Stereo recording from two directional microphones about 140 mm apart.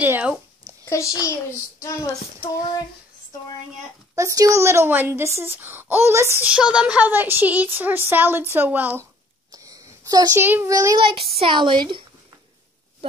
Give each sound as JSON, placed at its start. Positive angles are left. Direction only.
{"t": 0.0, "sound": "a sound", "side_deg": -10}
{"t": 0.7, "sound": "a child's voice", "side_deg": 20}
{"t": 4.1, "sound": "speech", "side_deg": -25}
{"t": 9.5, "sound": "a sound", "side_deg": -25}
{"t": 10.4, "sound": "speech", "side_deg": -15}
{"t": 11.0, "sound": "speech", "side_deg": -40}